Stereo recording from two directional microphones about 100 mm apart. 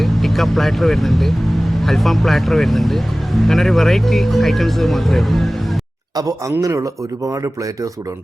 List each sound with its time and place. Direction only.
0.0 s speech: centre (ahead or behind)
6.6 s speech: 35° right (ahead or behind)